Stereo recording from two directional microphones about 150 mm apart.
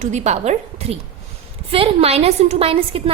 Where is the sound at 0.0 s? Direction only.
50° right (ahead or behind).